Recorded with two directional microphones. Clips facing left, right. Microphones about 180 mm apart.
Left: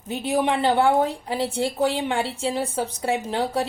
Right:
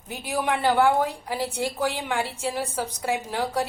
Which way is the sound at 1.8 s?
30° left (ahead or behind).